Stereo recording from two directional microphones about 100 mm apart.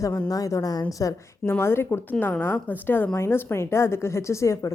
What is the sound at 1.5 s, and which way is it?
Speech, 25° left (ahead or behind).